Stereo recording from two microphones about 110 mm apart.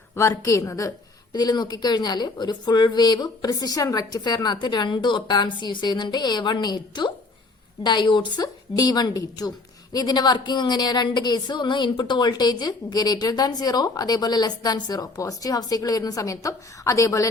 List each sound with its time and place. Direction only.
0.2 s speech: 30° left (ahead or behind)